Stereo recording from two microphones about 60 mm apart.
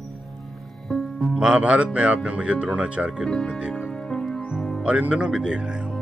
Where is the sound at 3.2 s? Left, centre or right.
Centre.